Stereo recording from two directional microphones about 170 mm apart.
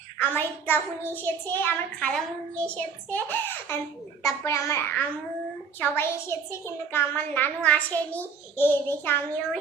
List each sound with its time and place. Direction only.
0.2 s a woman's voice: 10° left (ahead or behind)